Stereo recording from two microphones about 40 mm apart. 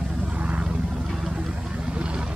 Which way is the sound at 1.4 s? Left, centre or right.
Right.